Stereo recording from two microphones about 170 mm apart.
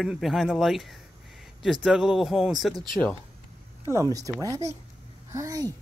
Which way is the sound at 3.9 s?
20° right (ahead or behind).